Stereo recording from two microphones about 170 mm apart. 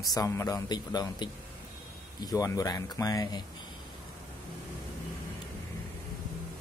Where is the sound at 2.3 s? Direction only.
20° left (ahead or behind).